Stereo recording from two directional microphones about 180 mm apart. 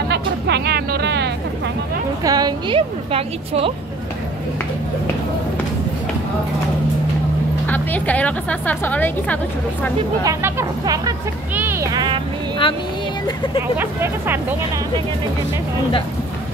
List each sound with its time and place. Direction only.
0.1 s music: 65° right (ahead or behind)
2.2 s a woman's voice: 20° right (ahead or behind)
7.6 s a woman's voice: 10° left (ahead or behind)
10.2 s speech: 15° right (ahead or behind)
12.6 s speech: 30° left (ahead or behind)
13.6 s speech: 10° right (ahead or behind)